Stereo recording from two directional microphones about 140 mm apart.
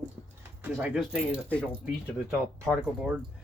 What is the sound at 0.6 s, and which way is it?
Speech, 10° right (ahead or behind).